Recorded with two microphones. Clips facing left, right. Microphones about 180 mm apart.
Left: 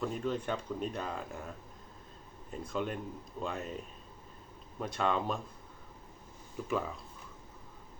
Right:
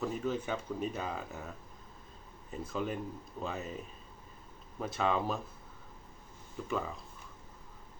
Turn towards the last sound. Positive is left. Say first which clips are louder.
# left 2 dB
turn(degrees=0)  # may be behind; listen again after turning